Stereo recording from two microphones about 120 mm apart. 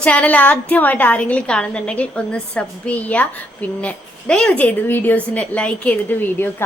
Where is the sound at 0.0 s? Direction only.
10° left (ahead or behind).